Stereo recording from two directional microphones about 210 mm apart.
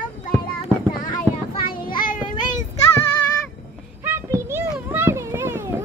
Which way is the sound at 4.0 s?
10° right (ahead or behind).